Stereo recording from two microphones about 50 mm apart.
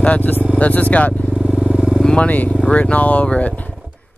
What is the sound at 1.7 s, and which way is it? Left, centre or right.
Vehicle, centre.